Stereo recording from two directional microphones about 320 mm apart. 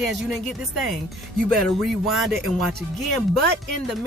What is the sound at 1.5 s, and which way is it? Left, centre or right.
Speech, centre.